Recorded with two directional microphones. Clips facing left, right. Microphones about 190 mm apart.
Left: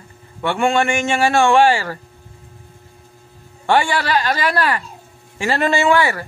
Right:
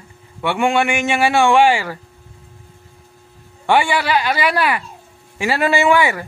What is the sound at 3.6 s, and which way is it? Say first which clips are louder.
Speech: right 1 dB; 10° right (ahead or behind).